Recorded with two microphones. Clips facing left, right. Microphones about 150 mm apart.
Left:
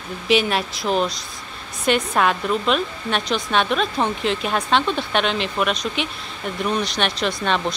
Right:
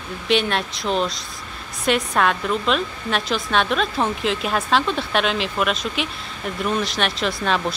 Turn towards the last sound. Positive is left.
turn(degrees=0)  # may be behind; listen again after turning